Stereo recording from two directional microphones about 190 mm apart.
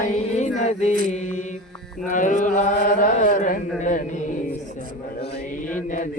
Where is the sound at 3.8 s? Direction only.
40° left (ahead or behind).